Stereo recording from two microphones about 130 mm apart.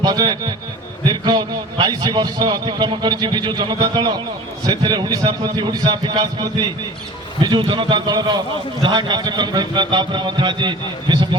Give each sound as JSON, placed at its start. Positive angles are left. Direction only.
{"t": 0.0, "sound": "a man's voice", "side_deg": -35}